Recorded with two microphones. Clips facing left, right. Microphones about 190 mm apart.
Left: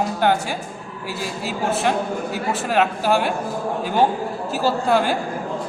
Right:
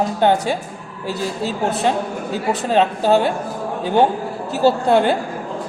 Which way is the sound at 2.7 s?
20° right (ahead or behind).